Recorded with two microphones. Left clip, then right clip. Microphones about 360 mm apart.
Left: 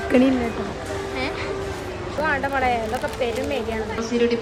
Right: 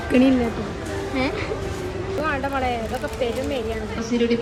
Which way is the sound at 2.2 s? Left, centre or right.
Left.